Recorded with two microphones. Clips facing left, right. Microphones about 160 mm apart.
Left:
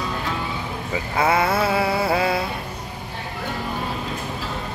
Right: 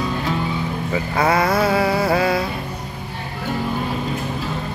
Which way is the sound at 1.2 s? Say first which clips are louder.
Right 2 dB; 30° left (ahead or behind).